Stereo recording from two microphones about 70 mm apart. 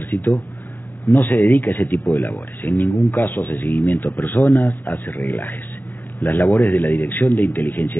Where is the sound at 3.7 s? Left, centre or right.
Left.